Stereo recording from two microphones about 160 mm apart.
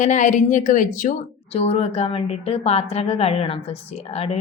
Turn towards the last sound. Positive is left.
turn(degrees=40)  # may be behind; listen again after turning